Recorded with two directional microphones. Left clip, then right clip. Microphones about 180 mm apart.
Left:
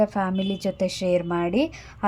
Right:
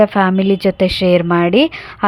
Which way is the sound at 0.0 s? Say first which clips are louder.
Right 11 dB; 25° right (ahead or behind).